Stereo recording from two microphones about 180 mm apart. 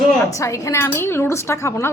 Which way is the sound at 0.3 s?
15° left (ahead or behind).